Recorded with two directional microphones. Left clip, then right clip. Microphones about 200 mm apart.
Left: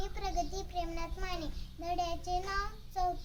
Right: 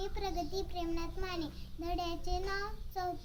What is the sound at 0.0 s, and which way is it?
Child singing, 15° left (ahead or behind).